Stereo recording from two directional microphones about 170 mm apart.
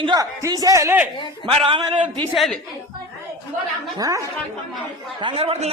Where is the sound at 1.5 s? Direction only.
30° right (ahead or behind).